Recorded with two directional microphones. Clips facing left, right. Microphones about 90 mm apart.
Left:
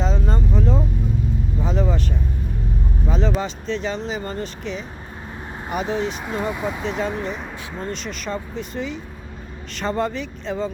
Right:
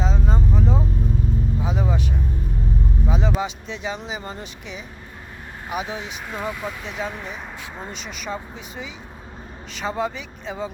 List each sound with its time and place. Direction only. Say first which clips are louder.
0.0 s vehicle: left 1 dB; 5° right (ahead or behind)
1.6 s speech: left 4 dB; 10° right (ahead or behind)
3.1 s speech: left 2 dB; 10° right (ahead or behind)
6.2 s speech: left 4 dB; 20° left (ahead or behind)
6.8 s speech: left 6 dB; 5° right (ahead or behind)